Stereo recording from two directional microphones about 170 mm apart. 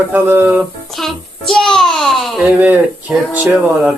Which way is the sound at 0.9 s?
Centre (ahead or behind).